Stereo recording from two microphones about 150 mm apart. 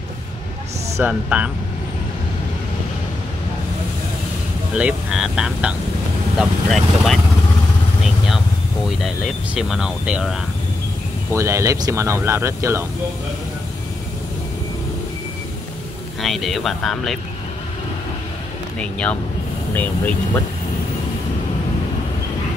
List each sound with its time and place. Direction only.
0.9 s speech: 10° right (ahead or behind)
4.7 s speech: 5° right (ahead or behind)
8.8 s speech: centre (ahead or behind)
11.3 s speech: 20° right (ahead or behind)
16.2 s speech: centre (ahead or behind)
18.8 s speech: 10° left (ahead or behind)